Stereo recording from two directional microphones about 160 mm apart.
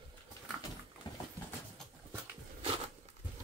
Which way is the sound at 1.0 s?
25° left (ahead or behind).